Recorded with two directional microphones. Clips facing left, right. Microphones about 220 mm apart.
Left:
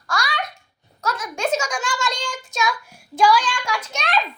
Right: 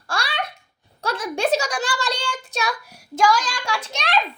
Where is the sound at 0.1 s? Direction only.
30° right (ahead or behind).